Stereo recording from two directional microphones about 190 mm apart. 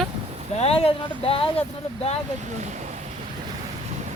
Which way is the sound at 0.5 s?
30° left (ahead or behind).